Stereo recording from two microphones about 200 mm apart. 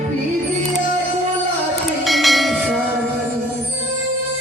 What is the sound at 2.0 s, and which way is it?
Church bell, centre (ahead or behind).